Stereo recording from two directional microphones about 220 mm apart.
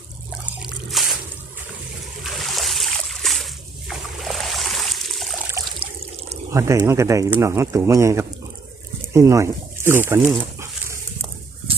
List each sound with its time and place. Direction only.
0.6 s drip: centre (ahead or behind)
2.2 s splash: centre (ahead or behind)
5.8 s water: 30° right (ahead or behind)
6.5 s speech: 15° right (ahead or behind)
10.6 s dog: 10° right (ahead or behind)